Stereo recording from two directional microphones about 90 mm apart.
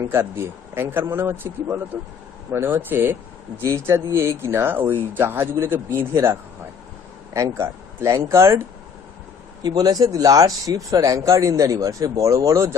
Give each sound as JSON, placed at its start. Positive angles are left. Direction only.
{"t": 0.1, "sound": "speech", "side_deg": -25}
{"t": 7.3, "sound": "speech", "side_deg": -35}
{"t": 9.6, "sound": "speech", "side_deg": -45}